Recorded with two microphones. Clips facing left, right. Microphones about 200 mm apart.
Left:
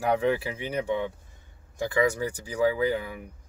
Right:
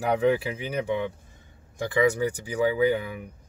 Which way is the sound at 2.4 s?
20° right (ahead or behind).